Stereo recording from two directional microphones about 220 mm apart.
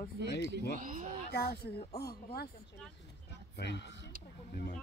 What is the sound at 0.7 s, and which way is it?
Speech, 35° right (ahead or behind).